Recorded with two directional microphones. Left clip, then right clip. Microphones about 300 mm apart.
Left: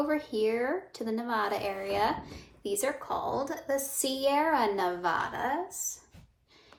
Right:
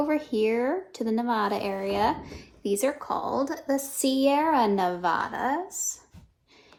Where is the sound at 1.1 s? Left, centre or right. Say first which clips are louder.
Right 4 dB; right.